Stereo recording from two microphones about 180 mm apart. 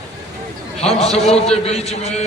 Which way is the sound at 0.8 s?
35° left (ahead or behind).